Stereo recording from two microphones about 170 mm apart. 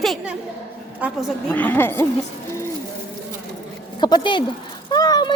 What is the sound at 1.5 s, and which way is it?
Speech, 10° left (ahead or behind).